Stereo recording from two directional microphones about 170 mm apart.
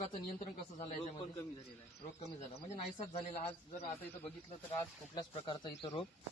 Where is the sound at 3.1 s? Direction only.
35° left (ahead or behind).